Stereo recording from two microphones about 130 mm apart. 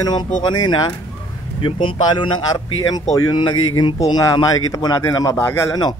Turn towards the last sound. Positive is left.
turn(degrees=30)  # may be behind; listen again after turning